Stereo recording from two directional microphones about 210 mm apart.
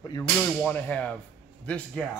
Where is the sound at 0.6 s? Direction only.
5° left (ahead or behind).